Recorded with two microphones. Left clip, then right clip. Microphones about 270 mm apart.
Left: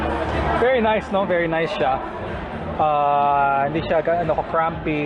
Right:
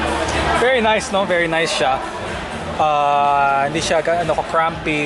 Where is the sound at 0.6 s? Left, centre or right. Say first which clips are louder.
Right 2 dB; centre.